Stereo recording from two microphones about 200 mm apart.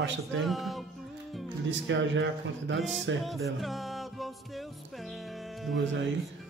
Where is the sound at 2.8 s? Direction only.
Centre (ahead or behind).